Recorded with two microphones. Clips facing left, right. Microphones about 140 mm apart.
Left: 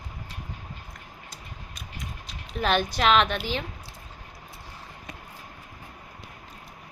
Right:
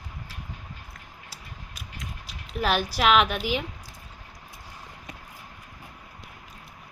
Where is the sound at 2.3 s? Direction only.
5° right (ahead or behind).